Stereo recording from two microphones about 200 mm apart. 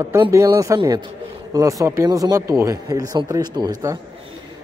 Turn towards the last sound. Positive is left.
turn(degrees=-20)  # may be behind; listen again after turning